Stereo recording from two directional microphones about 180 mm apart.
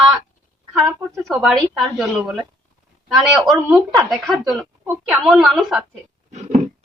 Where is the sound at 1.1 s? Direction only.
Centre (ahead or behind).